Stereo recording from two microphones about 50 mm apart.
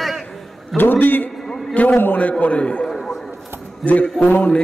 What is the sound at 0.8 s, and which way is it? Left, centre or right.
A man's voice, left.